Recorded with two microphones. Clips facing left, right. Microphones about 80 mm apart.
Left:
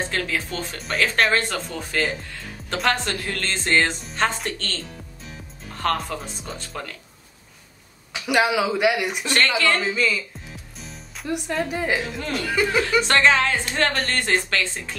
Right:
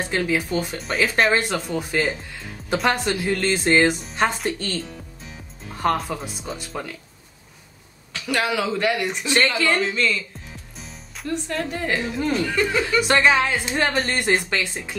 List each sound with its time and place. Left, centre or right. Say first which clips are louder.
0.0 s speech: right 3 dB; centre
0.7 s speech: left 1 dB; centre
5.9 s speech: right 2 dB; centre
8.1 s speech: left 3 dB; centre
9.2 s speech: right 2 dB; centre
9.8 s speech: right 1 dB; centre
11.2 s speech: left 1 dB; centre
13.0 s speech: right 2 dB; centre